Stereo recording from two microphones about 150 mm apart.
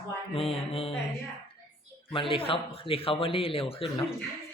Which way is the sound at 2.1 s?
35° left (ahead or behind).